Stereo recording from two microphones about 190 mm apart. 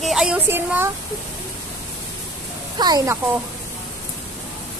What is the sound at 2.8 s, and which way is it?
Speech, 20° right (ahead or behind).